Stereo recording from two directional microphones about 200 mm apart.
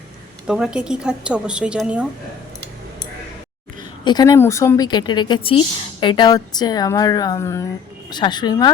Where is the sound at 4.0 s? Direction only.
20° left (ahead or behind).